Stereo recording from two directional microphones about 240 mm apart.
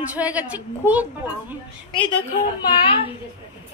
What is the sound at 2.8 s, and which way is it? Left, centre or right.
Speech, left.